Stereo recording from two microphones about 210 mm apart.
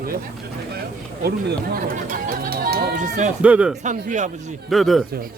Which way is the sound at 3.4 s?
5° right (ahead or behind).